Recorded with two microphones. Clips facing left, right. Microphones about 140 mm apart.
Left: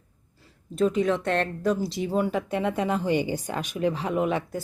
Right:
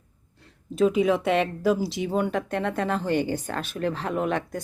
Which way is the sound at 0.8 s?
5° right (ahead or behind).